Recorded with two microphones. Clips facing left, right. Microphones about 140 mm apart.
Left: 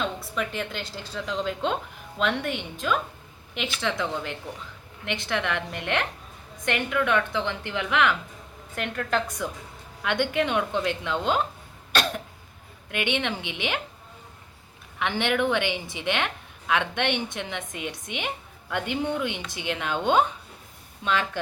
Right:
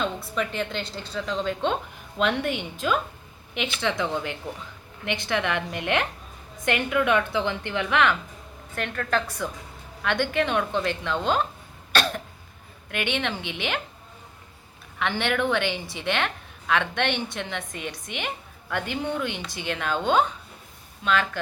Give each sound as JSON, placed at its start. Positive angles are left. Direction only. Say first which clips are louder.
{"t": 0.0, "sound": "a woman's voice", "louder": "right 2 dB", "side_deg": 5}
{"t": 8.7, "sound": "a woman's voice", "louder": "right 1 dB", "side_deg": 15}
{"t": 12.9, "sound": "a woman's voice", "louder": "even", "side_deg": 15}
{"t": 14.9, "sound": "a woman's voice", "louder": "even", "side_deg": 15}